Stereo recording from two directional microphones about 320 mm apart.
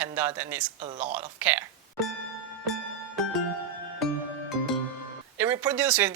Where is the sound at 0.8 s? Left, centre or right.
Right.